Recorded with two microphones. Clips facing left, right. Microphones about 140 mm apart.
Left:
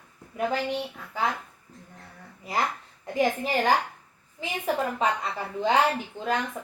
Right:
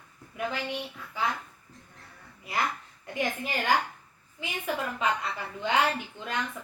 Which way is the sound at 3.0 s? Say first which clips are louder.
Left 6 dB; 35° left (ahead or behind).